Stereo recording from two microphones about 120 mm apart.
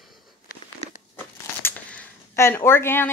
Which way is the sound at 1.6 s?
15° left (ahead or behind).